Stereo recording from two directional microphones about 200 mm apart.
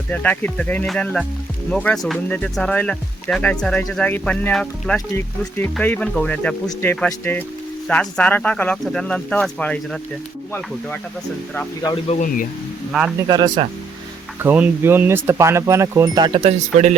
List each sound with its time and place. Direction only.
0.1 s speech: 10° left (ahead or behind)
12.0 s a man's voice: 40° left (ahead or behind)
12.9 s speech: centre (ahead or behind)
13.1 s speech: 20° right (ahead or behind)
14.3 s speech: 10° right (ahead or behind); by 16.9 s 30° right (ahead or behind)